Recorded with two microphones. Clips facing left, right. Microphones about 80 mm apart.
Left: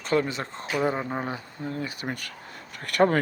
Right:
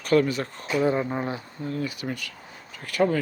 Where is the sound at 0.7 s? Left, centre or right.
Left.